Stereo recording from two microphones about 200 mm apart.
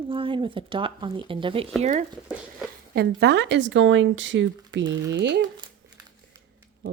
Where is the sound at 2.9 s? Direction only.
55° right (ahead or behind).